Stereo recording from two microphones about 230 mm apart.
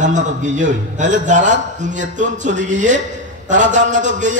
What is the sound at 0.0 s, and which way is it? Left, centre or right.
A man's voice, right.